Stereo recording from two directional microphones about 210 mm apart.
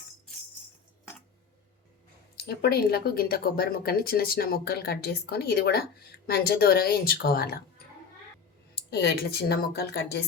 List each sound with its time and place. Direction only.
2.6 s speech: 50° left (ahead or behind)
8.7 s speech: 50° left (ahead or behind)